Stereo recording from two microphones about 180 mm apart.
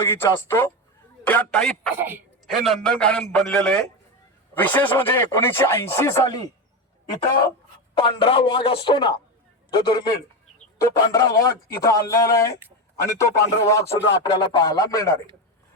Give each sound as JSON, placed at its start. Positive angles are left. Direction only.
{"t": 0.1, "sound": "a man's voice", "side_deg": 15}
{"t": 2.0, "sound": "a man's voice", "side_deg": -10}
{"t": 2.5, "sound": "a man's voice", "side_deg": 0}
{"t": 7.9, "sound": "a man's voice", "side_deg": 30}